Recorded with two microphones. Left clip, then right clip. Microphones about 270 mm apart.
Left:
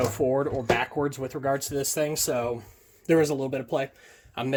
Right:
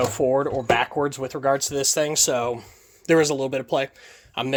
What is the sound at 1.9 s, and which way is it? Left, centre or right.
Speech, right.